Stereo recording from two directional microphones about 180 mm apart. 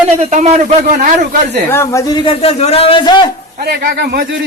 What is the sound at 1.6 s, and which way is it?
Speech, 15° left (ahead or behind).